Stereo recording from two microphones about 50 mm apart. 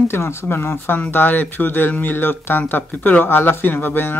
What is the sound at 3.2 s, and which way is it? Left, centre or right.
Speech, left.